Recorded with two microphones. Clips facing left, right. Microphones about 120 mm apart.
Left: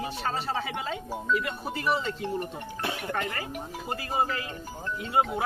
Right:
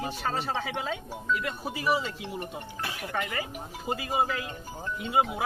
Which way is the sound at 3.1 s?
Centre (ahead or behind).